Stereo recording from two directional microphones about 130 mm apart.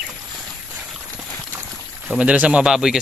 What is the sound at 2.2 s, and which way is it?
Speech, 10° right (ahead or behind).